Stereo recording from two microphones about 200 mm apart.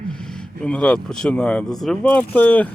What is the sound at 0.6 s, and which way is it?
Speech, 5° left (ahead or behind).